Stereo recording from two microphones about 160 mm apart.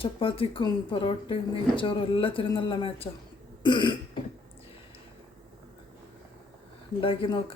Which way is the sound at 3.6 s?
30° left (ahead or behind).